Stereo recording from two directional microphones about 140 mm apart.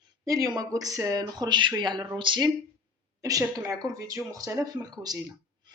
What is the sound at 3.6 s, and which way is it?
Speech, 25° right (ahead or behind).